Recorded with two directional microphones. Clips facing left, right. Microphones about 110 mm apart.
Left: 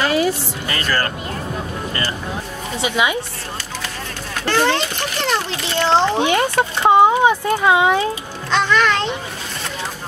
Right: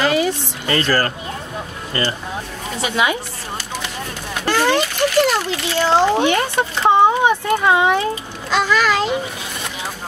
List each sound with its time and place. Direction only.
0.1 s a sound: centre (ahead or behind)
0.7 s speech: 35° right (ahead or behind)
2.8 s a woman's voice: 20° left (ahead or behind)
4.5 s a child's voice: 10° right (ahead or behind)
6.1 s speech: 20° left (ahead or behind)
8.5 s a child's voice: 5° right (ahead or behind)